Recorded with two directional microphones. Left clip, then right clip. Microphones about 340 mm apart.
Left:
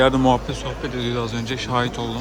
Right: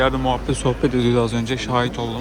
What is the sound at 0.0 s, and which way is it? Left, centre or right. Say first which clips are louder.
Speech: left 3 dB; centre.